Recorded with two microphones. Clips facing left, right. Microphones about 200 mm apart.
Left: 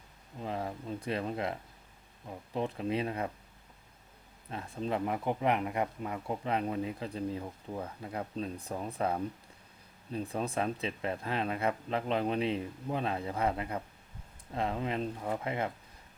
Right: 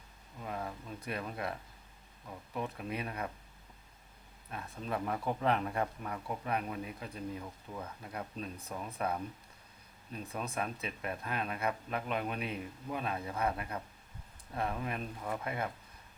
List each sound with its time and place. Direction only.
0.3 s speech: 25° left (ahead or behind)
4.5 s speech: 25° left (ahead or behind)